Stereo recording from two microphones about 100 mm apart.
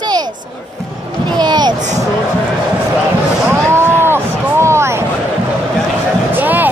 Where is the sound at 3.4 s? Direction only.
25° right (ahead or behind).